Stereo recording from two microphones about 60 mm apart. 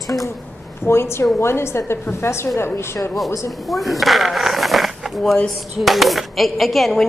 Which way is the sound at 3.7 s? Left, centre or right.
Centre.